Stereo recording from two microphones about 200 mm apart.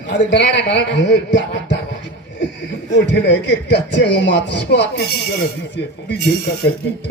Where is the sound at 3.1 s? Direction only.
60° left (ahead or behind).